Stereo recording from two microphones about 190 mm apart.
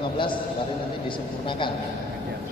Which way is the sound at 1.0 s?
25° left (ahead or behind).